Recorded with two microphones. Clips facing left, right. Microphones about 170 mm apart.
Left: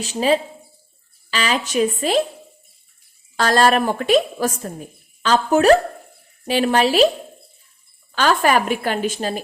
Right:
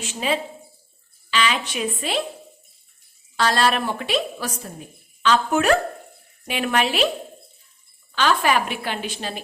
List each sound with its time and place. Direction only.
0.0 s a woman's voice: 35° left (ahead or behind)
3.3 s a woman's voice: 45° left (ahead or behind)
8.1 s a woman's voice: 45° left (ahead or behind)